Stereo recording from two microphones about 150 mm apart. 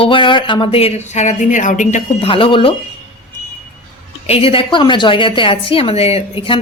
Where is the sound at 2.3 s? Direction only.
35° left (ahead or behind).